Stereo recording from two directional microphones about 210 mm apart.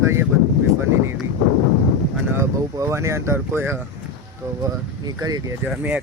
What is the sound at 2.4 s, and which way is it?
Speech, 15° right (ahead or behind).